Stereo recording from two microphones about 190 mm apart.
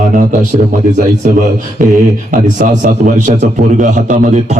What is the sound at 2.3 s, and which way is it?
Speech, 40° right (ahead or behind).